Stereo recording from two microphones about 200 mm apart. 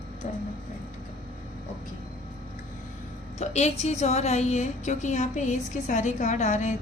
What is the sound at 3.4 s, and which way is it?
A woman's voice, 35° left (ahead or behind).